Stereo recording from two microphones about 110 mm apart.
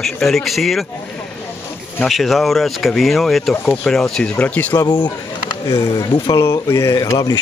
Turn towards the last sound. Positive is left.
turn(degrees=35)  # may be behind; listen again after turning